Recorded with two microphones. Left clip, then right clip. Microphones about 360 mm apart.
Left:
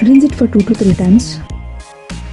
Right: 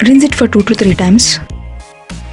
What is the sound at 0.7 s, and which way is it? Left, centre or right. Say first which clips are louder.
Speech: right 3 dB; right.